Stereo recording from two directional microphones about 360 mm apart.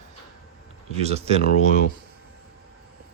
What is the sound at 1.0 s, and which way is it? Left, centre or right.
Speech, centre.